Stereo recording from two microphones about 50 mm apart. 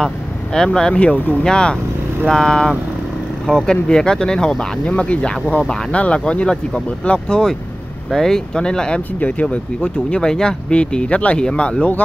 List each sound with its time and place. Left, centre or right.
0.0 s vehicle: centre
0.9 s speech: left
1.4 s speech: centre
4.8 s speech: left
9.2 s speech: left